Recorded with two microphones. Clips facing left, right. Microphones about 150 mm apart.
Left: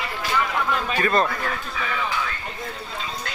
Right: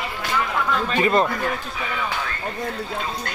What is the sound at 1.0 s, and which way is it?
Speech, 20° right (ahead or behind).